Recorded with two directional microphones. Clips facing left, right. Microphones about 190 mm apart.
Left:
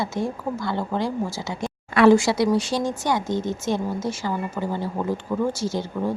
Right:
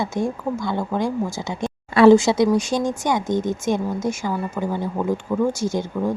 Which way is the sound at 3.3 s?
50° right (ahead or behind).